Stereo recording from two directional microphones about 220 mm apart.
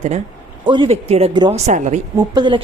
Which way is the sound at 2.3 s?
20° right (ahead or behind).